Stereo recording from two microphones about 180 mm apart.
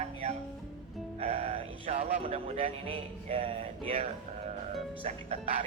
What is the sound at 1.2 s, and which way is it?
Speech, 35° right (ahead or behind).